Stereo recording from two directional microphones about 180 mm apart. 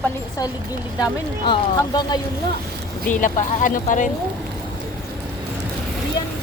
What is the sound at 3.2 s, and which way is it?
Speech, 45° left (ahead or behind).